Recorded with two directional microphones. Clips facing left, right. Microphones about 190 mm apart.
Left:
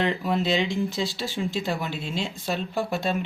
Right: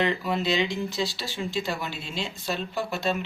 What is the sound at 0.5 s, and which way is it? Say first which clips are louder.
Speech: left 2 dB; 50° left (ahead or behind).